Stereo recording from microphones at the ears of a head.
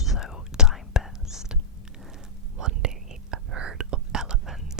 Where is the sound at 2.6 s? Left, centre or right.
Right.